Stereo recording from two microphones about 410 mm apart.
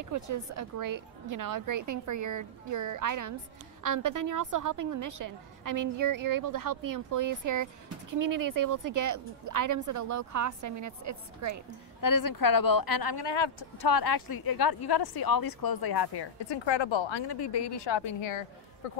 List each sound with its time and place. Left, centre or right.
0.0 s a woman's voice: right
12.0 s a woman's voice: left